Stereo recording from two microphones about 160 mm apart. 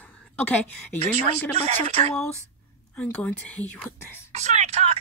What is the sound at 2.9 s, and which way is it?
Speech, 10° left (ahead or behind).